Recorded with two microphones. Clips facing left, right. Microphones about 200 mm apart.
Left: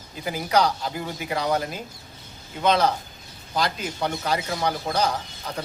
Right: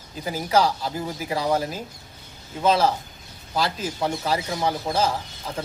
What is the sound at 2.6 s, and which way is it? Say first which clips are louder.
Speech: right 1 dB; 5° right (ahead or behind).